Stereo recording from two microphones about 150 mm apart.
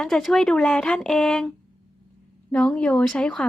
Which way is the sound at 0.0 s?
Centre (ahead or behind).